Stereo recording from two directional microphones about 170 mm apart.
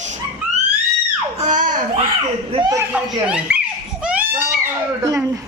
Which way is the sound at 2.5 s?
25° right (ahead or behind).